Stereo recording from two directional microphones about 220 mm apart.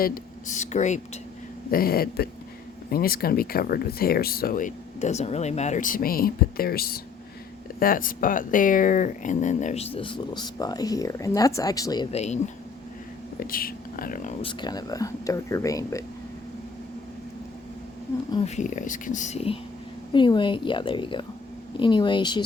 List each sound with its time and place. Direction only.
0.0 s speech: 40° left (ahead or behind); by 12.0 s 15° left (ahead or behind)
12.1 s speech: 30° left (ahead or behind)
13.4 s speech: 40° left (ahead or behind)
14.4 s speech: 20° left (ahead or behind)
18.3 s speech: 25° left (ahead or behind)